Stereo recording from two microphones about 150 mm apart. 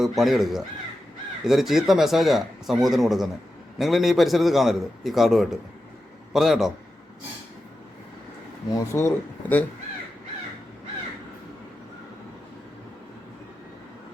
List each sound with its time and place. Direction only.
0.0 s a man's voice: centre (ahead or behind)
8.7 s speech: 20° left (ahead or behind)